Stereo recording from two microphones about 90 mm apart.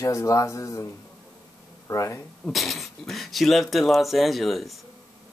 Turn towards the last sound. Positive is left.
turn(degrees=0)  # may be behind; listen again after turning